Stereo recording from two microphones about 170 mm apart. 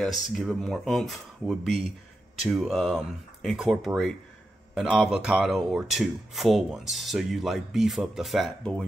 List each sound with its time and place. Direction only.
0.0 s speech: centre (ahead or behind)